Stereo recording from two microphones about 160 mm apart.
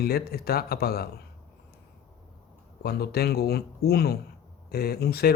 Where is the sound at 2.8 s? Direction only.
75° left (ahead or behind).